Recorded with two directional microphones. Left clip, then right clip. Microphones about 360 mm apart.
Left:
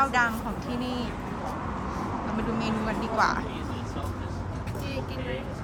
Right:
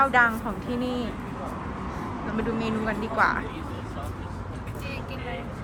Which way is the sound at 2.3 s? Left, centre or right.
Centre.